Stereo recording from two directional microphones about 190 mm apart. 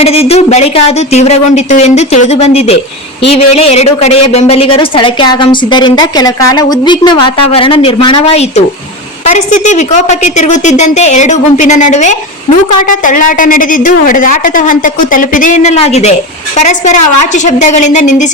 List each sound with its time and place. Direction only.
0.0 s a woman's voice: 30° left (ahead or behind)